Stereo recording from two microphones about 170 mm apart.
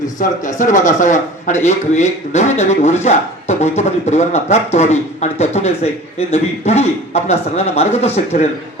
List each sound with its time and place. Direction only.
0.2 s a man's voice: 50° left (ahead or behind)